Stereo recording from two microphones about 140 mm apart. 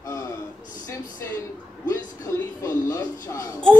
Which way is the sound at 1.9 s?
25° left (ahead or behind).